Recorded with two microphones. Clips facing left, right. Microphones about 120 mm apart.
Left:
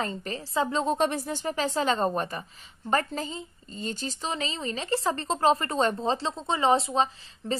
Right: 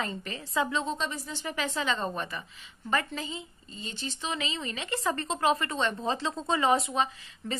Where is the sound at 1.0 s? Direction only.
60° left (ahead or behind).